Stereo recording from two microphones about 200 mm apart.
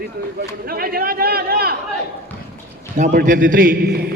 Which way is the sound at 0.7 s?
50° right (ahead or behind).